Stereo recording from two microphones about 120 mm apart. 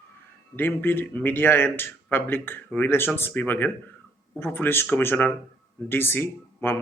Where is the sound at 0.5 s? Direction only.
15° left (ahead or behind).